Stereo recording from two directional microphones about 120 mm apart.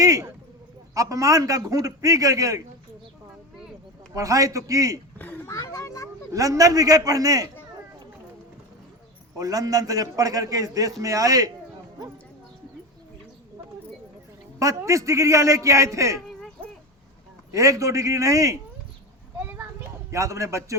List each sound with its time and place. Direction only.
0.0 s sheep: 25° right (ahead or behind)
0.9 s a man's voice: 30° right (ahead or behind)
4.1 s a man's voice: 30° right (ahead or behind)
5.1 s a sound: 15° left (ahead or behind)
5.5 s children playing: 30° left (ahead or behind)
6.3 s a man's voice: 30° right (ahead or behind)
9.4 s a man's voice: 30° right (ahead or behind)
14.6 s a man's voice: 25° right (ahead or behind)
17.5 s a man's voice: 25° right (ahead or behind)
20.1 s a man's voice: 25° right (ahead or behind)